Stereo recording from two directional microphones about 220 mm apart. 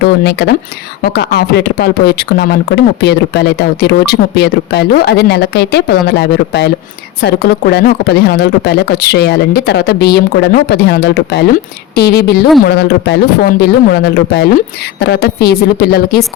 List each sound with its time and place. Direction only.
0.0 s speech: 50° left (ahead or behind)